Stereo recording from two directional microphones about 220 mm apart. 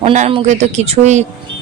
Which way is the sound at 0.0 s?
30° right (ahead or behind).